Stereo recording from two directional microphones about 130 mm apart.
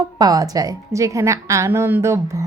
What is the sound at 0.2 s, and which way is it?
A woman's voice, 30° right (ahead or behind).